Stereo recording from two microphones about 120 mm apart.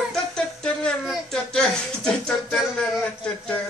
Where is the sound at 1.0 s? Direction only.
5° right (ahead or behind).